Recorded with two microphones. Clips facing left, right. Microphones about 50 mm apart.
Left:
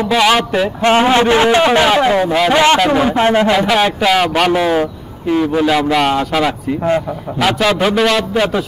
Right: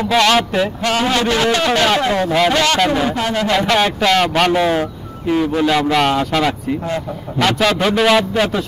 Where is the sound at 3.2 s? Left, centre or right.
Left.